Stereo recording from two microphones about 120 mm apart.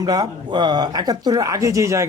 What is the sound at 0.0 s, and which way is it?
Speech, 35° right (ahead or behind).